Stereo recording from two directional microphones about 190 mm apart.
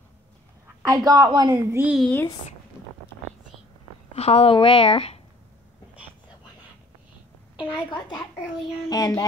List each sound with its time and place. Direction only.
0.8 s a woman's voice: 20° right (ahead or behind)
2.0 s speech: 10° left (ahead or behind)
4.1 s a woman's voice: 35° left (ahead or behind)
8.8 s child singing: 20° left (ahead or behind)